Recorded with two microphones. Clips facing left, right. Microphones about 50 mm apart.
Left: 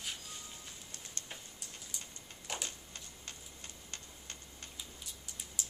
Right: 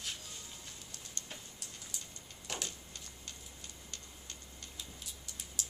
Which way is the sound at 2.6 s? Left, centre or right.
Left.